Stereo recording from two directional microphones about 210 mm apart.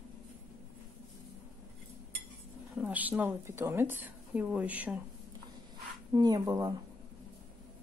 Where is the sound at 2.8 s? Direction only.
10° right (ahead or behind).